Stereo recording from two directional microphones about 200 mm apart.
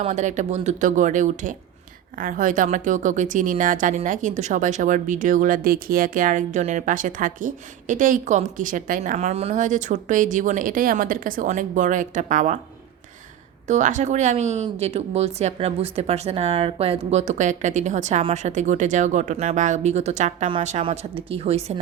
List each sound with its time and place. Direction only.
0.0 s speech: 35° right (ahead or behind)
13.7 s speech: 35° right (ahead or behind)